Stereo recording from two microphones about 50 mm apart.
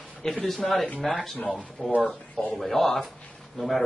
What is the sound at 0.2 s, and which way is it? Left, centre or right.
Speech, centre.